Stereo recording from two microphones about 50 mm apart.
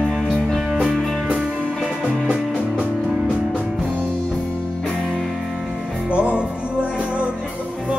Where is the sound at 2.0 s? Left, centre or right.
Centre.